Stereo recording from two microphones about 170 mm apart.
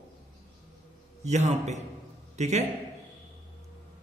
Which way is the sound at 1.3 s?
40° right (ahead or behind).